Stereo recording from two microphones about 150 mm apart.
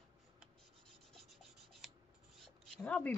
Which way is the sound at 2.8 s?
10° left (ahead or behind).